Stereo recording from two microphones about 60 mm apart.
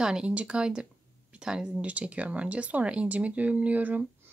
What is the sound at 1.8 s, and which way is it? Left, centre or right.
Speech, right.